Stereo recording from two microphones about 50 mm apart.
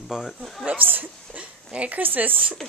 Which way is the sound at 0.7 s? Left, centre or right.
Right.